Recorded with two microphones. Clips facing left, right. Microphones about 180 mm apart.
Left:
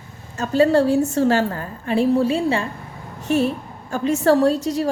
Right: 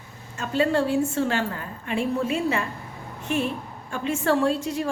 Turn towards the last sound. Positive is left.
turn(degrees=40)  # may be behind; listen again after turning